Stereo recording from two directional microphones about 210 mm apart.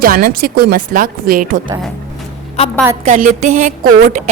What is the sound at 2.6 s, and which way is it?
Speech, 30° left (ahead or behind).